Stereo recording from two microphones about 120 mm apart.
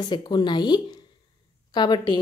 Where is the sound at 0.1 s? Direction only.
40° left (ahead or behind).